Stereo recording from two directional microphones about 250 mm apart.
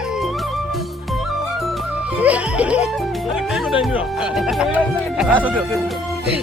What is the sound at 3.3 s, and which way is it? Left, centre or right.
Speech, centre.